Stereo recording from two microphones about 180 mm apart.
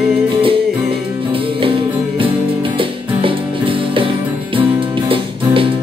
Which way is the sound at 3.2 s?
30° right (ahead or behind).